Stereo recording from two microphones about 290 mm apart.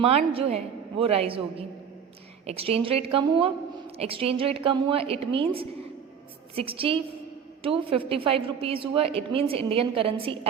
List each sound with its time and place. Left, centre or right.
0.0 s a woman's voice: centre